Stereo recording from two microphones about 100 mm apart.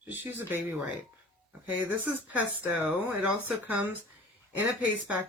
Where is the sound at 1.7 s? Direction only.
15° right (ahead or behind).